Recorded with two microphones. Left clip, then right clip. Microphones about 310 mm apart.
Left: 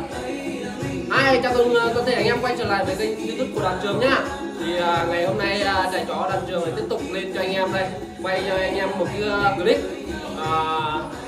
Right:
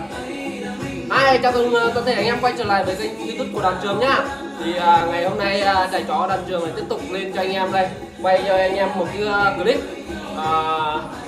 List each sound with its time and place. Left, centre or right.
1.1 s speech: centre
10.4 s music: centre